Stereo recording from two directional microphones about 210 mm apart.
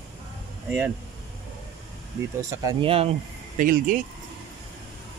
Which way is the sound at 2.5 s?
15° right (ahead or behind).